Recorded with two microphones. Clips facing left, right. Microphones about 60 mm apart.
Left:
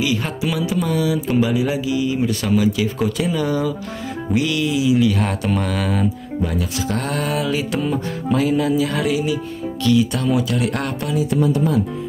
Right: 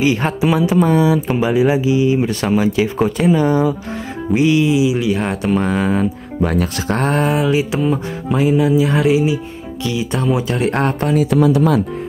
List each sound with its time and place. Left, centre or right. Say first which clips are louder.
0.0 s speech: right 6 dB; right
6.4 s speech: right 6 dB; right
11.1 s speech: right 4 dB; right